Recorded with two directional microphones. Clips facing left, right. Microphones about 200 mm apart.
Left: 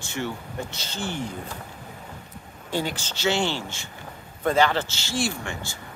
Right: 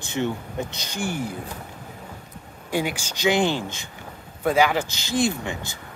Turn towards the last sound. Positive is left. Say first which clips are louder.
# right 3 dB
turn(degrees=-20)  # may be behind; listen again after turning